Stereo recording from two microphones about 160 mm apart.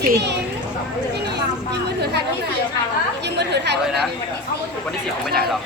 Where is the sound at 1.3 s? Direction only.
90° right.